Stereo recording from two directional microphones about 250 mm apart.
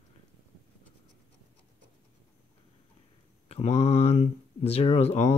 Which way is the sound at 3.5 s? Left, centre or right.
Left.